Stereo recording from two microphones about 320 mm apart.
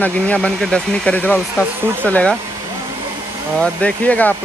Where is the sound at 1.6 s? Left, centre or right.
Centre.